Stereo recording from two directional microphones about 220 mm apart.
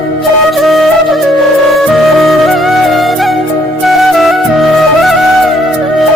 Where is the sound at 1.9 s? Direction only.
Centre (ahead or behind).